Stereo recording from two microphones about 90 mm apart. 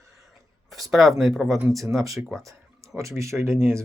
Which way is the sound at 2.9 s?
35° right (ahead or behind).